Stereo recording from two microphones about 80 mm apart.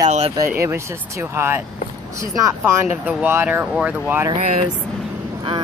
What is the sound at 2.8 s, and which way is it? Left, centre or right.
Speech, centre.